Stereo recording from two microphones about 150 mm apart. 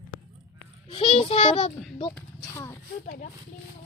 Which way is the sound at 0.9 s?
35° left (ahead or behind).